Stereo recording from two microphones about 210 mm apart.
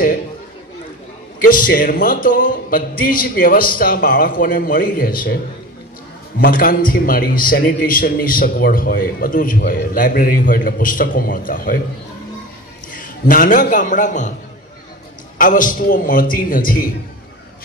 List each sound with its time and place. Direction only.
1.4 s a man's voice: 40° left (ahead or behind)
6.4 s a man's voice: 45° left (ahead or behind)
12.9 s a man's voice: 40° left (ahead or behind)
15.3 s a man's voice: 40° left (ahead or behind)